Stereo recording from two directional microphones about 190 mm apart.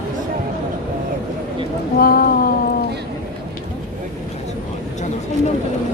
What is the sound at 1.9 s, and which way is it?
Speech, 50° left (ahead or behind).